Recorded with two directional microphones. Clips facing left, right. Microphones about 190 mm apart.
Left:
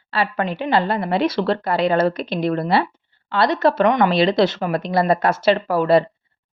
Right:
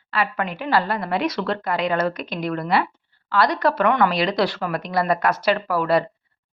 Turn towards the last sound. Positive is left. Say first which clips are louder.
# left 4 dB
turn(degrees=25)  # may be behind; listen again after turning